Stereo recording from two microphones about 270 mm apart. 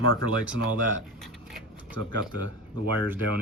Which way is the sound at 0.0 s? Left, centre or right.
Right.